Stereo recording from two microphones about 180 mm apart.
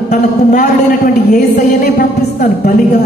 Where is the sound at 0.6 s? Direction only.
40° left (ahead or behind).